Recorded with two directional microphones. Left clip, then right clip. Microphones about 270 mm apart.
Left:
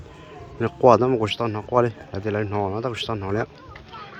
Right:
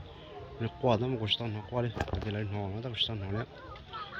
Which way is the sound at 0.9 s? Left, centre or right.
Centre.